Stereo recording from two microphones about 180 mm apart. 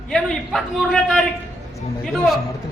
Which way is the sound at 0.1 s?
5° left (ahead or behind).